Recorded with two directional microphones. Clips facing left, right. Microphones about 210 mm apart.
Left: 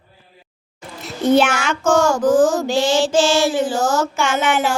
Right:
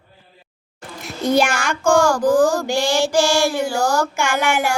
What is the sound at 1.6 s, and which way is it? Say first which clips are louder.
Speech: even; 10° right (ahead or behind).